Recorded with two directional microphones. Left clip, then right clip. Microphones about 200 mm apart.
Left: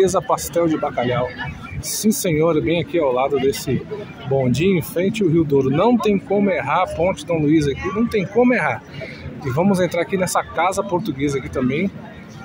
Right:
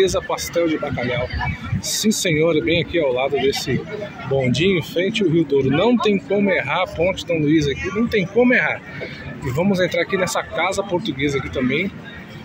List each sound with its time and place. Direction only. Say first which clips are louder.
0.0 s speech: left 2 dB; 20° left (ahead or behind)
2.0 s speech: even; 15° left (ahead or behind)
7.7 s speech: even; 45° left (ahead or behind)
8.1 s speech: right 1 dB; 5° left (ahead or behind)